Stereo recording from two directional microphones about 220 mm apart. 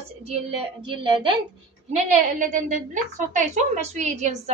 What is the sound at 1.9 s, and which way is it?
A woman's voice, 35° right (ahead or behind).